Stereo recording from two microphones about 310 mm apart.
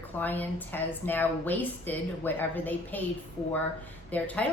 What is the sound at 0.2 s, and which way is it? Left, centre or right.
A woman's voice, centre.